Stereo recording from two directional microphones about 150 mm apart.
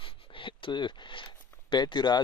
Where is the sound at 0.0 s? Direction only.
35° left (ahead or behind).